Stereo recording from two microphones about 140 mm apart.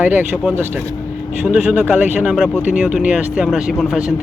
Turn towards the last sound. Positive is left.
turn(degrees=-5)  # may be behind; listen again after turning